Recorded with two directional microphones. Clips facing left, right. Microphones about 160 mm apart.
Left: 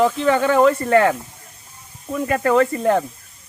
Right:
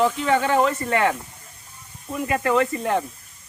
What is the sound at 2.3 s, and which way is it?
Speech, 40° left (ahead or behind).